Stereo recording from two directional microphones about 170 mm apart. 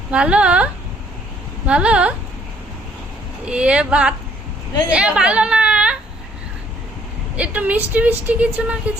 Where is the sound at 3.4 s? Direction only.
5° right (ahead or behind).